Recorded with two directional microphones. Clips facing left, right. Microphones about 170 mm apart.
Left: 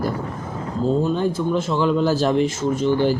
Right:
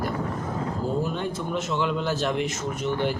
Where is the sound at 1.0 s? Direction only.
30° left (ahead or behind).